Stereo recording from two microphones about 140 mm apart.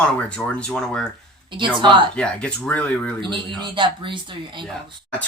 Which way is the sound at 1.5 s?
35° right (ahead or behind).